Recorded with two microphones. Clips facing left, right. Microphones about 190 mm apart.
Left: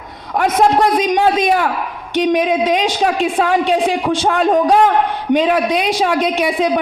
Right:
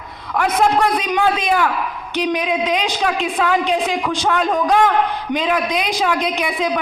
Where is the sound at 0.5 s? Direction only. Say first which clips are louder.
Left 4 dB; 35° left (ahead or behind).